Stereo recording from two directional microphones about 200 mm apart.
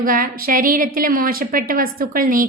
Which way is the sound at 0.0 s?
45° right (ahead or behind).